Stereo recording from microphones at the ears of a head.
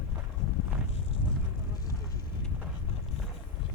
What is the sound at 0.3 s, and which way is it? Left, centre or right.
Walk, left.